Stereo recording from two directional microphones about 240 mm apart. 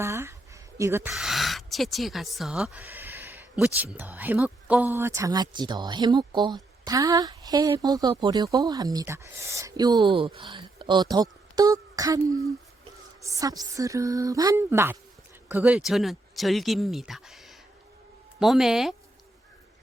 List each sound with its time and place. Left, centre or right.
0.0 s speech: centre
13.2 s speech: centre